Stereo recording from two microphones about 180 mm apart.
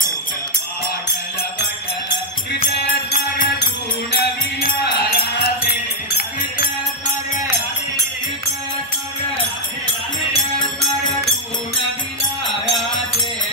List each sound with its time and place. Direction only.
2.7 s music: 55° left (ahead or behind)